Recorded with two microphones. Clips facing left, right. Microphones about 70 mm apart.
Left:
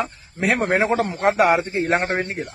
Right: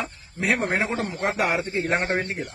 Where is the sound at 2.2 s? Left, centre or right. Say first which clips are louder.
Left 3 dB; centre.